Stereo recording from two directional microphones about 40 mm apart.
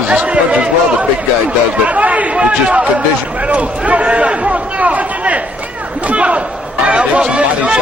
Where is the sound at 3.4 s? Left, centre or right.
Right.